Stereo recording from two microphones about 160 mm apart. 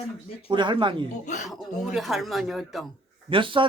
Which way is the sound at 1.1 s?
50° left (ahead or behind).